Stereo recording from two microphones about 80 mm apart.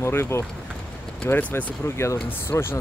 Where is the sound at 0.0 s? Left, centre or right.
Left.